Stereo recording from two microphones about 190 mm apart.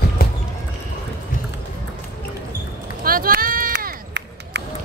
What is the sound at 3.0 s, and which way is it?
Run, 50° right (ahead or behind).